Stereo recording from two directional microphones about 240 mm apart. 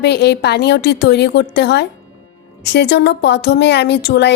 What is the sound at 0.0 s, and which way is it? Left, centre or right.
A woman's voice, left.